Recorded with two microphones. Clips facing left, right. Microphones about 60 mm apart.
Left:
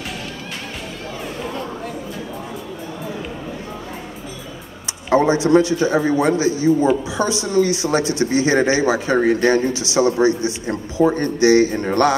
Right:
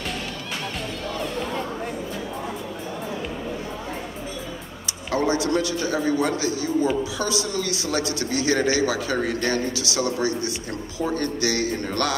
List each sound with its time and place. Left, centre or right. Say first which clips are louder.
5.1 s speech: left 8 dB; left